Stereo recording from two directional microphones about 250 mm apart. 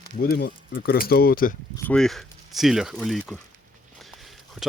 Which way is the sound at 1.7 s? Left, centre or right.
Centre.